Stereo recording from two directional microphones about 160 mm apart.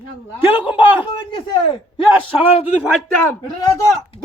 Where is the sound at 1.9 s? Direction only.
35° left (ahead or behind).